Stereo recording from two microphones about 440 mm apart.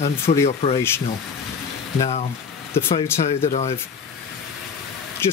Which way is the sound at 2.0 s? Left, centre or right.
Centre.